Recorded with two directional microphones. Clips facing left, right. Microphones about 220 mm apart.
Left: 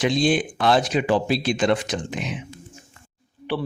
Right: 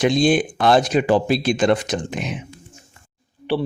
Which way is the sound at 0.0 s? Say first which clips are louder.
Right 4 dB; 45° right (ahead or behind).